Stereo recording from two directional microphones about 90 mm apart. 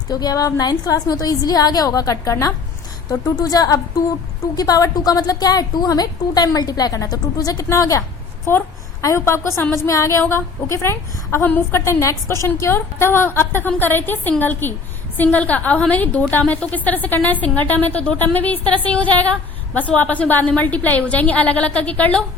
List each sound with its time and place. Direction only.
0.1 s a woman's voice: 50° left (ahead or behind)
8.5 s a woman's voice: 30° left (ahead or behind)